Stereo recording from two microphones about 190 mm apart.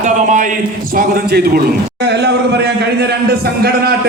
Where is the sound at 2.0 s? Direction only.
60° right (ahead or behind).